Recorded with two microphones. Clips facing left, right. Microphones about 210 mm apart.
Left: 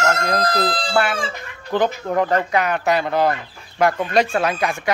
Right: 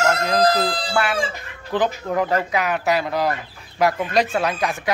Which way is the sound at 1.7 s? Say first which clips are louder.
Left 2 dB; centre (ahead or behind).